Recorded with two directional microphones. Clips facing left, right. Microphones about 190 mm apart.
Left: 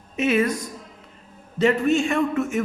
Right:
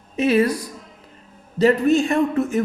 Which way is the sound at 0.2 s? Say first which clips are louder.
Right 3 dB; 35° right (ahead or behind).